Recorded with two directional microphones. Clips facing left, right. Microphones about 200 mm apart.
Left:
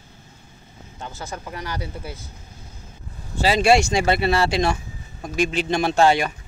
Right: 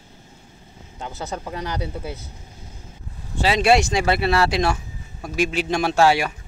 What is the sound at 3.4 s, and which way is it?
Speech, centre (ahead or behind).